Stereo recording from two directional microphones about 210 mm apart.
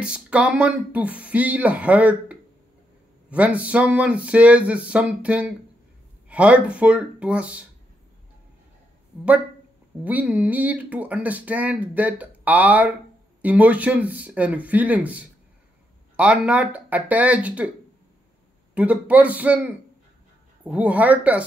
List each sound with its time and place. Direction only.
0.0 s speech: 5° right (ahead or behind)
10.0 s speech: 5° right (ahead or behind)
18.8 s speech: 5° right (ahead or behind)